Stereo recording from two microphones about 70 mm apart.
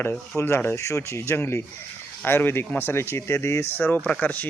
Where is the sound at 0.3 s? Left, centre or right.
Left.